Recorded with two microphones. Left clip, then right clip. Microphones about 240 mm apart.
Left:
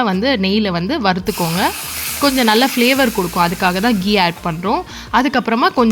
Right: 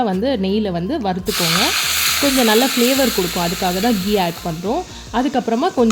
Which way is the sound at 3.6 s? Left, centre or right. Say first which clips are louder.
Left 3 dB; centre.